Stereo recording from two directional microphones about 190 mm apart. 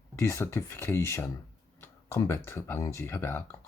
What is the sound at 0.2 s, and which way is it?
Speech, 15° left (ahead or behind).